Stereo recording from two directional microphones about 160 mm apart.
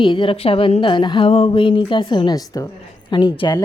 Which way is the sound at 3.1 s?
30° left (ahead or behind).